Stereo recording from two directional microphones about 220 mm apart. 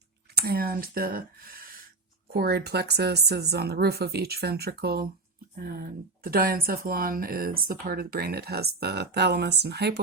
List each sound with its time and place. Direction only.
0.3 s speech: 45° right (ahead or behind)